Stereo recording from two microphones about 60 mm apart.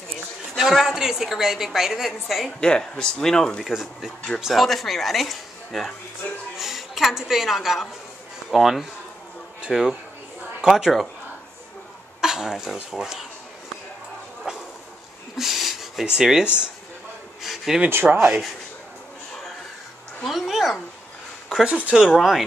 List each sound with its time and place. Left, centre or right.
0.6 s a woman's voice: centre
2.6 s speech: centre
3.7 s a woman's voice: centre
12.2 s speech: centre
14.5 s a sound: centre
17.8 s speech: right
18.2 s speech: centre
20.2 s a woman's voice: centre